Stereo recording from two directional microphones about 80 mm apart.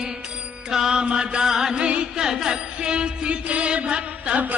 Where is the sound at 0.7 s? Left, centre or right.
Centre.